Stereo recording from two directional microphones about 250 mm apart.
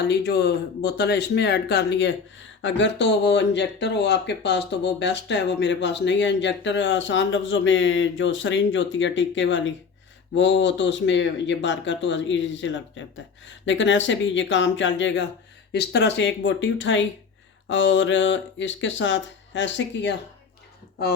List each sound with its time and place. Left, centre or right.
0.0 s speech: left